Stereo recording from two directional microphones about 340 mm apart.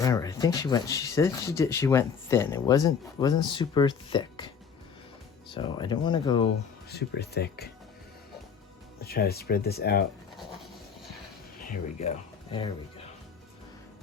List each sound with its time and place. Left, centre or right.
0.0 s speech: centre
5.5 s speech: centre
6.9 s speech: left
9.0 s speech: left
10.3 s a sound: centre
11.7 s speech: centre